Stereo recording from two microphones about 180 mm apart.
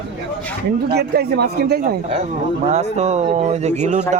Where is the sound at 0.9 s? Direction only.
60° right (ahead or behind).